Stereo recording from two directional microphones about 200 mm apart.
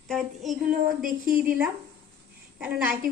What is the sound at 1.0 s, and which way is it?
Speech, 45° right (ahead or behind).